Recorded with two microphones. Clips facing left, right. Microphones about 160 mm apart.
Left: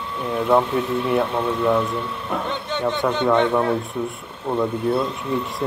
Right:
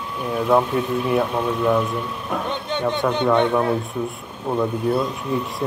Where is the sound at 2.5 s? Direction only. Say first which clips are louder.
Right 1 dB; 15° right (ahead or behind).